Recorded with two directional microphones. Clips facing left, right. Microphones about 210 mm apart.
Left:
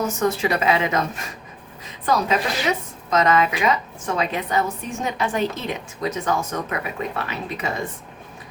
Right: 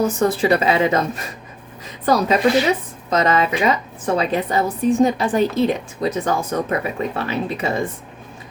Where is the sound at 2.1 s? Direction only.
35° right (ahead or behind).